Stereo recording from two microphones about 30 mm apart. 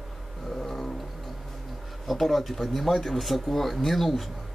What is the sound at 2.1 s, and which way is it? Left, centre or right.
Speech, centre.